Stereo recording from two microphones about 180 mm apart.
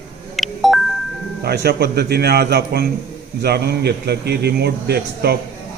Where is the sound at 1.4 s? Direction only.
65° right (ahead or behind).